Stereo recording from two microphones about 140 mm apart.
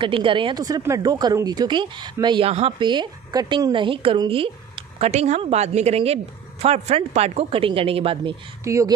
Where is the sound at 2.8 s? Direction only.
35° right (ahead or behind).